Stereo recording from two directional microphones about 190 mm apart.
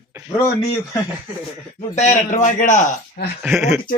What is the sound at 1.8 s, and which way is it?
A man's voice, 40° left (ahead or behind).